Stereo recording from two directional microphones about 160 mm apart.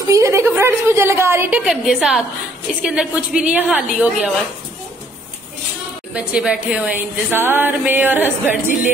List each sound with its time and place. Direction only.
0.1 s speech: 20° right (ahead or behind)
1.7 s a woman's voice: 5° right (ahead or behind)
6.1 s speech: 5° right (ahead or behind)